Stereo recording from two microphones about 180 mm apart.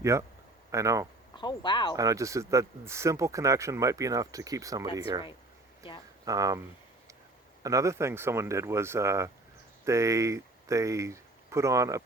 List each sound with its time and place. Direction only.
0.0 s speech: 15° right (ahead or behind)
1.4 s speech: 25° left (ahead or behind)
2.0 s speech: 20° right (ahead or behind)
6.2 s speech: 20° right (ahead or behind)
7.6 s speech: 20° right (ahead or behind)